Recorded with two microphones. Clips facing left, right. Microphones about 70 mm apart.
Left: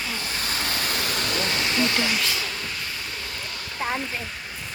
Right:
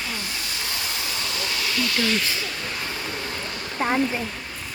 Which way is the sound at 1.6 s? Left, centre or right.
Left.